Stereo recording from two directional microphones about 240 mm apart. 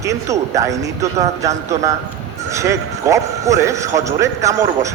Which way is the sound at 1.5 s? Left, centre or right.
Right.